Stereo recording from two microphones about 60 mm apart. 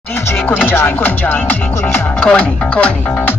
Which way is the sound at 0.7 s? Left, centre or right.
Left.